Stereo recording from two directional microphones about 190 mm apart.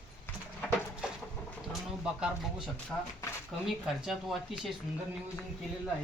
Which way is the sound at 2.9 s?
5° left (ahead or behind).